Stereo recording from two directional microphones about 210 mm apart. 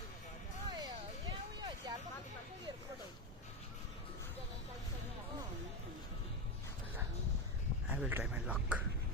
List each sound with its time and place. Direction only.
0.7 s music: 20° right (ahead or behind)
7.9 s speech: 5° right (ahead or behind)